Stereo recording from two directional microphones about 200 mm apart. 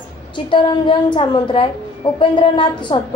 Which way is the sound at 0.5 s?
25° left (ahead or behind).